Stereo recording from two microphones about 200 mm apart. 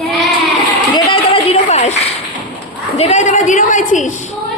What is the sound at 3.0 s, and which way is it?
A woman's voice, 35° left (ahead or behind).